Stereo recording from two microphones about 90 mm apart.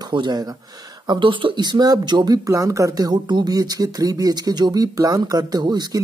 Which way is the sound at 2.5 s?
35° right (ahead or behind).